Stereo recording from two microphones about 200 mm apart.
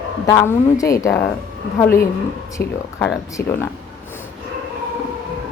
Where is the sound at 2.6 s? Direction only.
55° left (ahead or behind).